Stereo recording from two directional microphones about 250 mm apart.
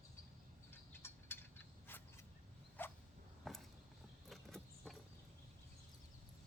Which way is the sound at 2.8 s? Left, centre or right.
Centre.